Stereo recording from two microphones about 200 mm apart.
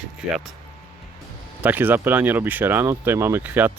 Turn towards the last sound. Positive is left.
turn(degrees=-10)  # may be behind; listen again after turning